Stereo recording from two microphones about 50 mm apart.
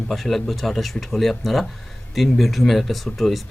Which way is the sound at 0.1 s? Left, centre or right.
Centre.